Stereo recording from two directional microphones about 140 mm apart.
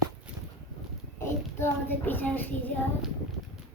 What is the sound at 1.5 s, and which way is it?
Speech, 15° left (ahead or behind).